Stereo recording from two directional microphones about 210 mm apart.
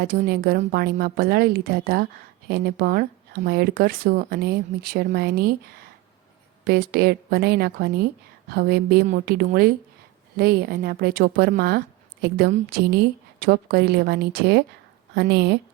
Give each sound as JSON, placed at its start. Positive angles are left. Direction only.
{"t": 0.0, "sound": "speech", "side_deg": -45}
{"t": 6.7, "sound": "speech", "side_deg": -45}
{"t": 12.5, "sound": "a woman's voice", "side_deg": -35}
{"t": 13.4, "sound": "speech", "side_deg": -45}